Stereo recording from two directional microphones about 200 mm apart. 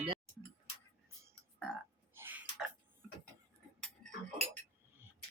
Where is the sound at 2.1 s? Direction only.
10° right (ahead or behind).